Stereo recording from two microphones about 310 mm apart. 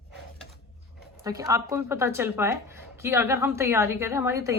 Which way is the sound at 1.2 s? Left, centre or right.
Centre.